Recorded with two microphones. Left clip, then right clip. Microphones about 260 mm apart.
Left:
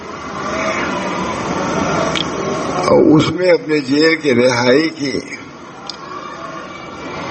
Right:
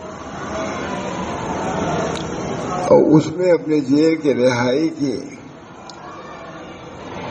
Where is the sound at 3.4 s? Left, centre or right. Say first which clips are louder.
Left 3 dB; centre.